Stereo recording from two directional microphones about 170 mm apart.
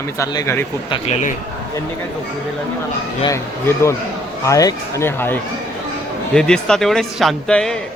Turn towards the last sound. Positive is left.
turn(degrees=5)  # may be behind; listen again after turning